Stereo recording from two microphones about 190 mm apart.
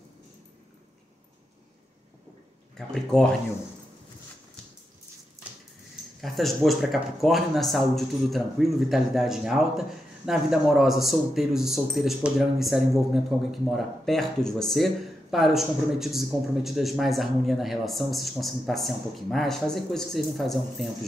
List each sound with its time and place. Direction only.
2.9 s speech: 5° left (ahead or behind)
6.2 s speech: centre (ahead or behind)